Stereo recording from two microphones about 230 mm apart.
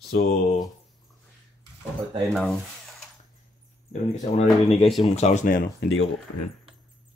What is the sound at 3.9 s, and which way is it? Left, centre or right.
Speech, left.